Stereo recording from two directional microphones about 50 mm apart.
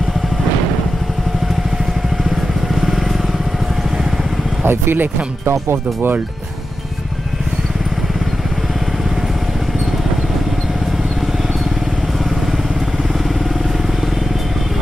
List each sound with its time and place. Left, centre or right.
2.7 s vehicle: centre
4.6 s speech: right
5.5 s speech: right